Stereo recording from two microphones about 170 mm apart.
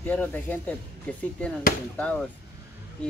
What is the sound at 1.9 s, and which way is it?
Speech, 10° left (ahead or behind).